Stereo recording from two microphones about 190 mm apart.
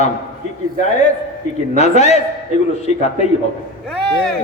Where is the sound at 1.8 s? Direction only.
35° left (ahead or behind).